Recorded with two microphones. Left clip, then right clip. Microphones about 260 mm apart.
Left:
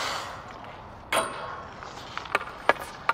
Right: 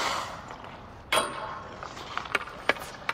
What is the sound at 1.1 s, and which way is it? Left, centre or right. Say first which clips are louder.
Tick-tock: even; centre.